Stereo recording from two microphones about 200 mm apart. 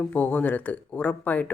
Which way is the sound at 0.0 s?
10° left (ahead or behind).